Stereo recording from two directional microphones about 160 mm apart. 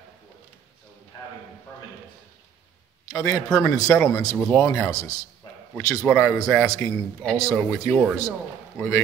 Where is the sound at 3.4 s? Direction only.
5° left (ahead or behind).